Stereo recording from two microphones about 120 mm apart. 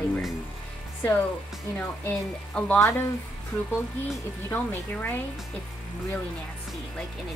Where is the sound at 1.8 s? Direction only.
10° left (ahead or behind).